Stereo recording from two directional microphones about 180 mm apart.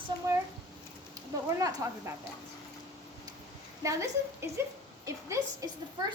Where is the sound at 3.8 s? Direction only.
15° right (ahead or behind).